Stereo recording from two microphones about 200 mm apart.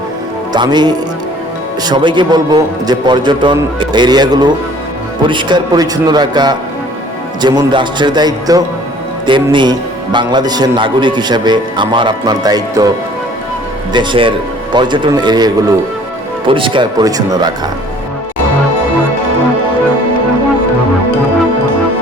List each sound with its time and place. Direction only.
0.5 s a man's voice: 20° right (ahead or behind)
13.9 s a man's voice: 25° right (ahead or behind)